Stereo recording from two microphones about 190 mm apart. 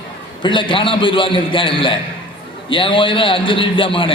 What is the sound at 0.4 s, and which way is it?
A man's voice, 25° left (ahead or behind).